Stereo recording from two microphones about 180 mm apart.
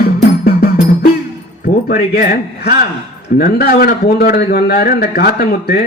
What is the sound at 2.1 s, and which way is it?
Speech, 55° left (ahead or behind).